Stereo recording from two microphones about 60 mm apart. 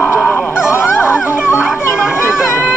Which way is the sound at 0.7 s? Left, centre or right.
Left.